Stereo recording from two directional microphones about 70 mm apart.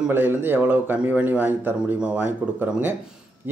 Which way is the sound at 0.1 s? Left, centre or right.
Right.